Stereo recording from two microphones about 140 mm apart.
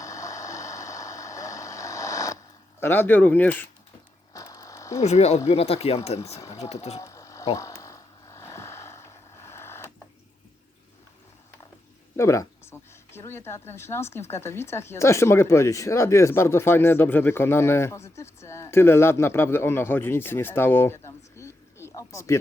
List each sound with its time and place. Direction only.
0.0 s vehicle: 20° left (ahead or behind)
2.8 s speech: 15° left (ahead or behind)
4.4 s a sound: 25° left (ahead or behind)
4.9 s speech: 50° left (ahead or behind)
6.4 s speech: 25° left (ahead or behind)
7.0 s a sound: 20° left (ahead or behind)
12.1 s speech: 20° left (ahead or behind)